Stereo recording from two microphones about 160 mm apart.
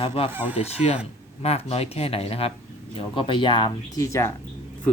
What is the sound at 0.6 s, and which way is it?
Speech, 40° left (ahead or behind).